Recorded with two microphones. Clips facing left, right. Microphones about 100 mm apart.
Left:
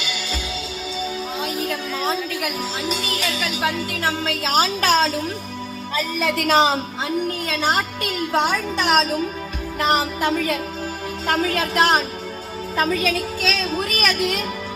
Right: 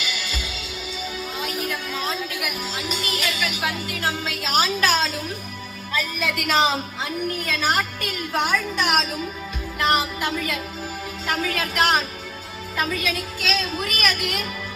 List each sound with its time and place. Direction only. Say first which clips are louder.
2.0 s speech: left 6 dB; 35° left (ahead or behind)
7.4 s a woman's voice: left 2 dB; 25° left (ahead or behind)
8.5 s speech: left 3 dB; 35° left (ahead or behind)